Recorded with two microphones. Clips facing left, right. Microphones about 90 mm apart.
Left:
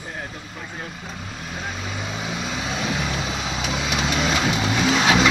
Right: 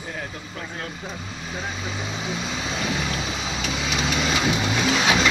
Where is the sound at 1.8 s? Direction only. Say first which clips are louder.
Even; centre (ahead or behind).